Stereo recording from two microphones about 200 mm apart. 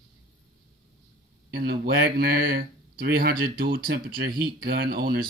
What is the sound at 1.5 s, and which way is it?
Speech, 50° right (ahead or behind).